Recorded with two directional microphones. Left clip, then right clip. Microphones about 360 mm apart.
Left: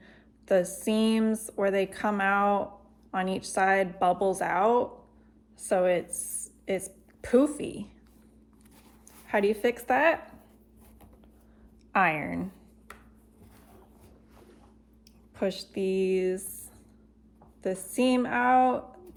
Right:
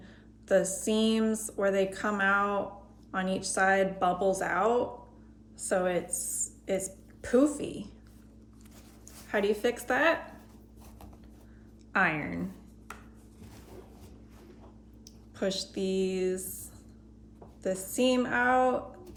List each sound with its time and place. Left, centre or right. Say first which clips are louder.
0.0 s speech: even; centre
6.3 s a sound: left 1 dB; centre
7.3 s speech: left 2 dB; centre
9.2 s speech: left 3 dB; centre
12.2 s speech: left 2 dB; centre
15.4 s speech: left 2 dB; centre
17.6 s speech: left 1 dB; centre